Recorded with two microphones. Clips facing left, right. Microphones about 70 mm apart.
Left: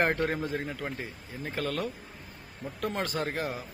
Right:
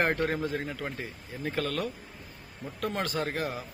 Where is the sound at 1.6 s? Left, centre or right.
Left.